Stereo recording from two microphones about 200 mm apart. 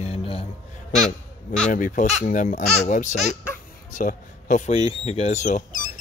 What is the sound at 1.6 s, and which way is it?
Speech, 40° left (ahead or behind).